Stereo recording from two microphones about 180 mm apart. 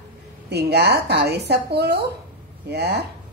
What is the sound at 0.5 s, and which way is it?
Speech, 65° right (ahead or behind).